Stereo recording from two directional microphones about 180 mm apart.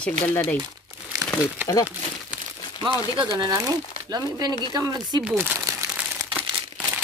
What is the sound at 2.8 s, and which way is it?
Speech, 25° right (ahead or behind).